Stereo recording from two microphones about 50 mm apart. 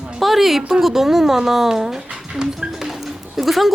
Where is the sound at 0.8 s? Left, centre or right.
Centre.